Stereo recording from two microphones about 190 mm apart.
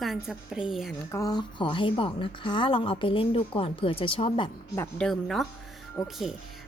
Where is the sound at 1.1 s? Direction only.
15° left (ahead or behind).